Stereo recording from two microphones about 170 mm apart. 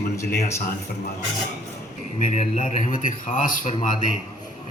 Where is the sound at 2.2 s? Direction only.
45° left (ahead or behind).